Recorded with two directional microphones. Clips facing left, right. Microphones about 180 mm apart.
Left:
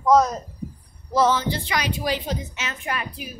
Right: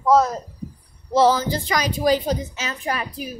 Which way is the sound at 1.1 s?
35° right (ahead or behind).